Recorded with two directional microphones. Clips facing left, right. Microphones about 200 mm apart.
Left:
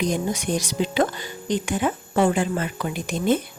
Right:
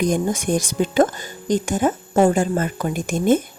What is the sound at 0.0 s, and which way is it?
Speech, 50° right (ahead or behind).